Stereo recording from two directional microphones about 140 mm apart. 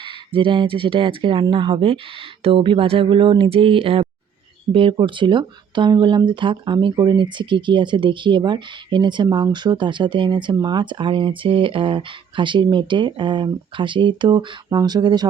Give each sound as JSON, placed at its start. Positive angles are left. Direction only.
{"t": 0.0, "sound": "speech", "side_deg": -40}